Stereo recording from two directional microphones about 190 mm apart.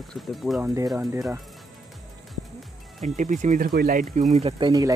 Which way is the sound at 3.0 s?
40° right (ahead or behind).